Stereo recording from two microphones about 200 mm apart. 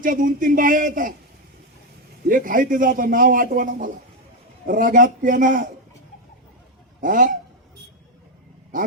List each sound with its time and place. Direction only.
0.0 s a man's voice: 40° right (ahead or behind)
2.3 s a man's voice: 45° right (ahead or behind)
7.0 s a man's voice: 40° right (ahead or behind)
8.7 s a man's voice: 40° right (ahead or behind)